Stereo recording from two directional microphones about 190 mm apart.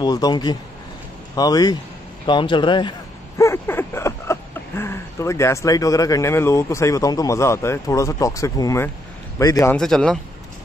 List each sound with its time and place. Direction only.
0.0 s speech: 20° left (ahead or behind)
3.3 s a sound: 15° left (ahead or behind)
9.4 s a man's voice: 20° left (ahead or behind)
9.8 s a man's voice: 5° left (ahead or behind)